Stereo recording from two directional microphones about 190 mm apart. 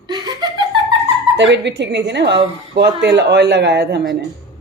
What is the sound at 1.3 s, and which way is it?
Speech, 65° right (ahead or behind).